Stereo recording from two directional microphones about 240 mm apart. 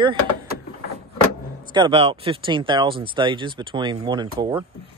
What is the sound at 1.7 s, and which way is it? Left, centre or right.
Speech, right.